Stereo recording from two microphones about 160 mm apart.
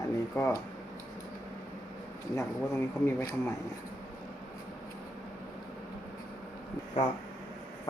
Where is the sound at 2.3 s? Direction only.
15° left (ahead or behind).